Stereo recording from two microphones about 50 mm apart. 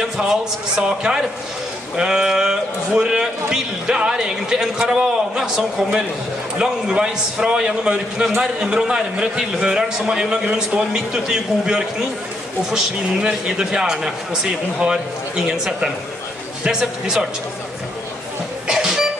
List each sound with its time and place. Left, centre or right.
0.0 s a man's voice: centre
9.4 s a man's voice: centre
13.3 s a man's voice: centre
18.7 s a sound: centre